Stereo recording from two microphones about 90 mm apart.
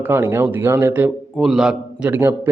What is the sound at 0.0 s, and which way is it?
Speech, 25° right (ahead or behind).